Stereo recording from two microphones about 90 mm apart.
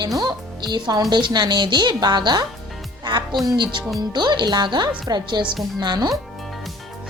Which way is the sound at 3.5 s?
60° right (ahead or behind).